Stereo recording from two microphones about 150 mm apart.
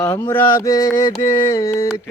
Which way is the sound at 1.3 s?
15° left (ahead or behind).